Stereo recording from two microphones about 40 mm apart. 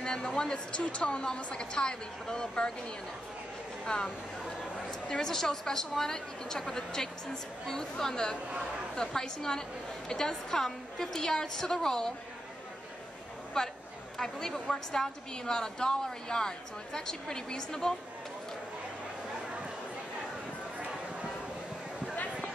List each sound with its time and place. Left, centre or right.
0.4 s a woman's voice: left
3.8 s speech: left
5.2 s a woman's voice: centre
13.5 s a woman's voice: centre
22.1 s a sound: left